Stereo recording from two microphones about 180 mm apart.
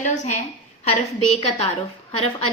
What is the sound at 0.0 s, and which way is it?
A woman's voice, 40° left (ahead or behind).